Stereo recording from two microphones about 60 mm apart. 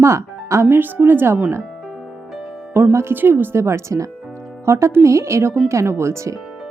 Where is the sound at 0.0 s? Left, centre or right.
Right.